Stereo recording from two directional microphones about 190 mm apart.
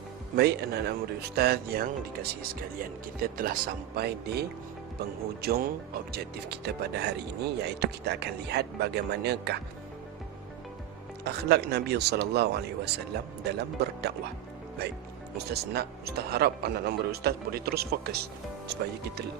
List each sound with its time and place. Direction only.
0.3 s speech: 55° right (ahead or behind)
11.2 s speech: 60° right (ahead or behind)
15.4 s speech: 60° right (ahead or behind)